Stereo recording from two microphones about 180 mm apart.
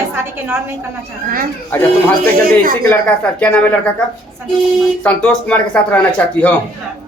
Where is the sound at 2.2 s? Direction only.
55° right (ahead or behind).